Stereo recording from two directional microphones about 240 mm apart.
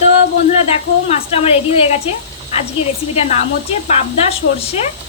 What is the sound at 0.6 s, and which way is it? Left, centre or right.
Speech, left.